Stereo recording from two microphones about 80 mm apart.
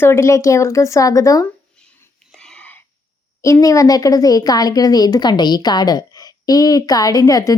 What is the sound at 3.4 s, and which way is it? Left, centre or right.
A woman's voice, left.